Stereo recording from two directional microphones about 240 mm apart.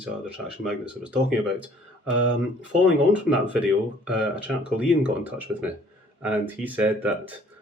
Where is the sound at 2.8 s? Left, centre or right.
Centre.